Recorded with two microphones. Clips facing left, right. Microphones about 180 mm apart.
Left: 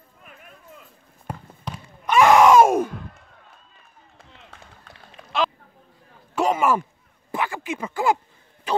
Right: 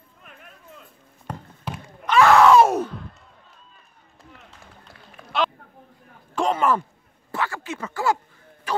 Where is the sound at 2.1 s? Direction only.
15° left (ahead or behind).